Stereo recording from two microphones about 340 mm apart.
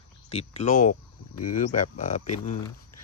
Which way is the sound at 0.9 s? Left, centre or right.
Left.